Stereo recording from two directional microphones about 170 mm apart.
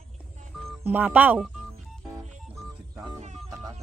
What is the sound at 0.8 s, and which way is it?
Speech, 10° right (ahead or behind).